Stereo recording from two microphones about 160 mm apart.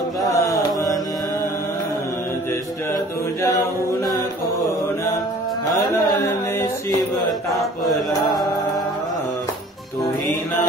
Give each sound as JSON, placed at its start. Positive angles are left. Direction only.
{"t": 0.3, "sound": "mantra", "side_deg": 20}